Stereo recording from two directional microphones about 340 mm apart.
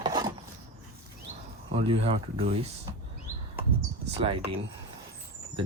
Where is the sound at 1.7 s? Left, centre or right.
Centre.